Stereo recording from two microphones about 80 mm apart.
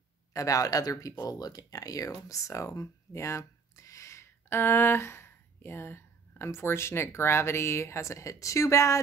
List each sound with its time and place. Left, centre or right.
0.3 s speech: left